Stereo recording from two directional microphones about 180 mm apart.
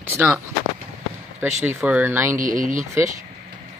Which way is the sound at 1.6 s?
10° right (ahead or behind).